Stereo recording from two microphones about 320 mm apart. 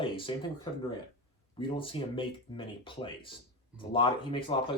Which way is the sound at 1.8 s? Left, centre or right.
Centre.